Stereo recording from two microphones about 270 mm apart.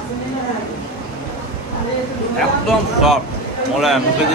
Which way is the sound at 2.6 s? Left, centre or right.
Centre.